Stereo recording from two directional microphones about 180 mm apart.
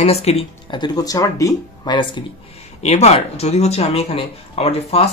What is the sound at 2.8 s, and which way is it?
Speech, 35° left (ahead or behind).